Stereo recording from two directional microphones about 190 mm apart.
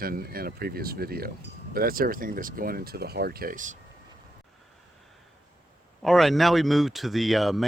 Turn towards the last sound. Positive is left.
turn(degrees=0)  # may be behind; listen again after turning